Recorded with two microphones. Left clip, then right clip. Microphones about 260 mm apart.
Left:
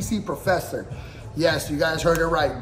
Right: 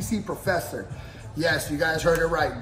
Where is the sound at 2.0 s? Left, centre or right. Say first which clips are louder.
Left 2 dB; left.